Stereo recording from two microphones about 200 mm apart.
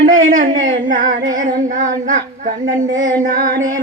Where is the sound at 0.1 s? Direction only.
40° right (ahead or behind).